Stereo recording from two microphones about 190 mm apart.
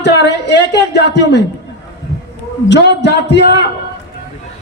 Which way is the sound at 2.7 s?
65° left (ahead or behind).